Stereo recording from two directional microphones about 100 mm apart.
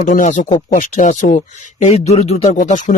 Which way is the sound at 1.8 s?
90° left.